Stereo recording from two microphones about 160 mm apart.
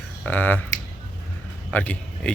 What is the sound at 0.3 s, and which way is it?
Speech, 10° left (ahead or behind).